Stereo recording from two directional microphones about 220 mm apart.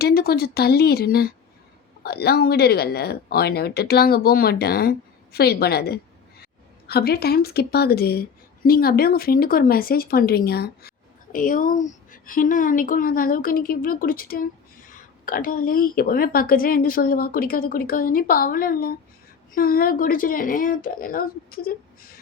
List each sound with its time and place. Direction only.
0.0 s a woman's voice: 45° left (ahead or behind)